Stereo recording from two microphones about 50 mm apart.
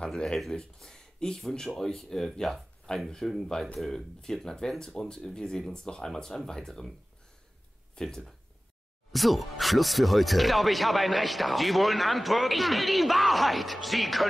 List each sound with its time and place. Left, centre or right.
0.1 s speech: centre
0.4 s speech: centre
3.5 s speech: centre
7.9 s speech: centre